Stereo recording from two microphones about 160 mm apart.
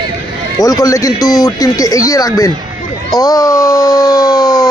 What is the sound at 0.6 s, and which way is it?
A man's voice, 20° left (ahead or behind).